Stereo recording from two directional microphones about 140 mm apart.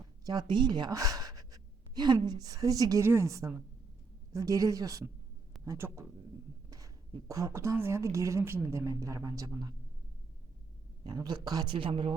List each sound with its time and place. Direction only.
0.3 s gasp: 30° right (ahead or behind)
2.2 s speech: 30° right (ahead or behind)
11.0 s speech: 30° right (ahead or behind)